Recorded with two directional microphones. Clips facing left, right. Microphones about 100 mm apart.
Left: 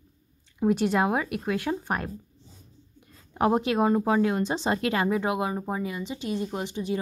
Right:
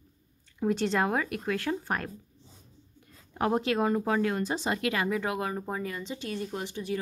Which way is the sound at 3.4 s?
20° left (ahead or behind).